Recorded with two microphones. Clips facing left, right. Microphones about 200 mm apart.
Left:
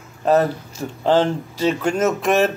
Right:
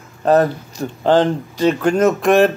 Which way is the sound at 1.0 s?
5° left (ahead or behind).